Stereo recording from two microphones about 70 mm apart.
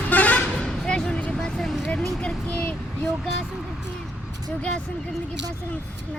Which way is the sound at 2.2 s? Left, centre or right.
Centre.